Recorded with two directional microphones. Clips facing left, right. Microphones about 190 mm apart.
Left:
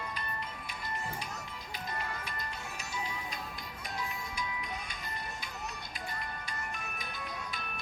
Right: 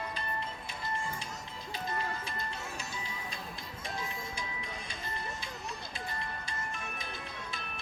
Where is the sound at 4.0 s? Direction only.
30° right (ahead or behind).